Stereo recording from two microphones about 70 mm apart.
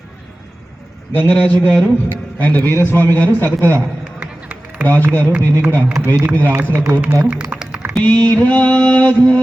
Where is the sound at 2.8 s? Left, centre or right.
Left.